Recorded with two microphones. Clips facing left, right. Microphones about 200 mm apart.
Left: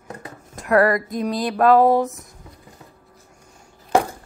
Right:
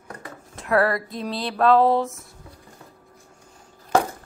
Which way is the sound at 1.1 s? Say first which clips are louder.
Left 6 dB; 45° left (ahead or behind).